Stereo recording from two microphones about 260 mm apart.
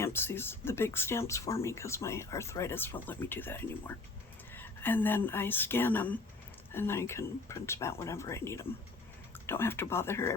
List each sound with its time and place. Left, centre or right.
0.0 s speech: centre